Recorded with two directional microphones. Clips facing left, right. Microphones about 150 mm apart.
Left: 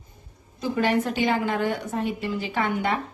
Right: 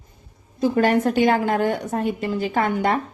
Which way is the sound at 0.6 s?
45° right (ahead or behind).